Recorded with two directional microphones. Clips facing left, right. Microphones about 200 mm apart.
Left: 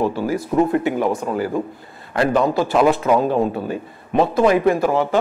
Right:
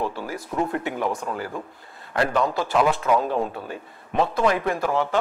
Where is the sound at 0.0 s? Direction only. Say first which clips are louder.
Left 8 dB; 10° left (ahead or behind).